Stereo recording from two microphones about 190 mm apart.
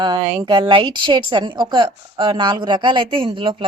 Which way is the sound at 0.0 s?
25° right (ahead or behind).